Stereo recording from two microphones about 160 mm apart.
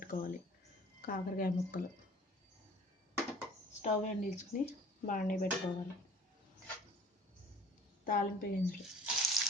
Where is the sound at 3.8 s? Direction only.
45° left (ahead or behind).